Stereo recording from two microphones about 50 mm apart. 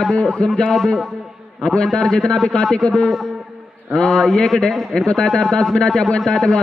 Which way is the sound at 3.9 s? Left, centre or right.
Centre.